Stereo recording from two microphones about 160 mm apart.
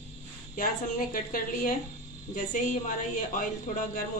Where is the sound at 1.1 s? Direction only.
60° left (ahead or behind).